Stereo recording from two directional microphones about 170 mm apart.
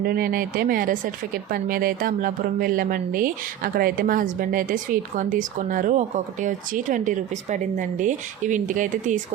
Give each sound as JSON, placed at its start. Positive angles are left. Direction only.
{"t": 0.0, "sound": "speech", "side_deg": -60}